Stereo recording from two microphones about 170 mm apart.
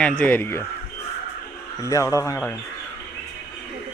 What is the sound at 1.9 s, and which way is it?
Speech, 20° left (ahead or behind).